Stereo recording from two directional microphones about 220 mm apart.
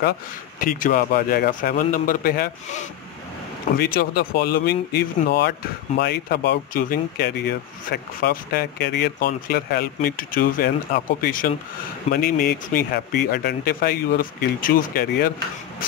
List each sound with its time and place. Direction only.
0.6 s a man's voice: 40° left (ahead or behind)